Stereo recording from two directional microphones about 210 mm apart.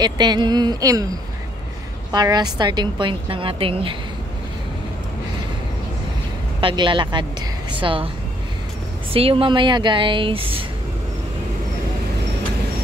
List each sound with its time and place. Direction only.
0.0 s a woman's voice: 20° right (ahead or behind)
2.1 s a woman's voice: 20° right (ahead or behind)
6.6 s a woman's voice: 25° right (ahead or behind)
9.1 s a woman's voice: 25° right (ahead or behind)